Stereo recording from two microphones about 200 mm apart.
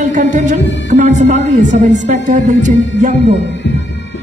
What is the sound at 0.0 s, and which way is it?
Speech, 40° right (ahead or behind).